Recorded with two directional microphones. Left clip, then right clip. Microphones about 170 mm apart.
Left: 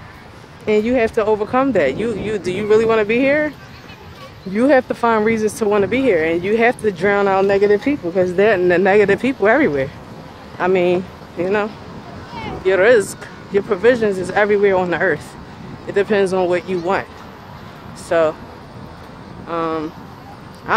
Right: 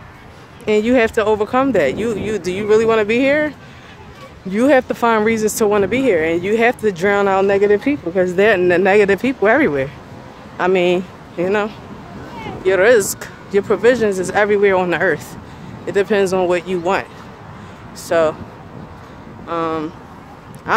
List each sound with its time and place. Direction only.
0.7 s speech: 35° right (ahead or behind)
4.6 s speech: 35° right (ahead or behind)
19.4 s speech: 30° right (ahead or behind)